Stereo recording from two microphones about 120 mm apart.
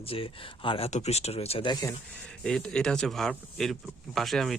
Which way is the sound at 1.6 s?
35° left (ahead or behind).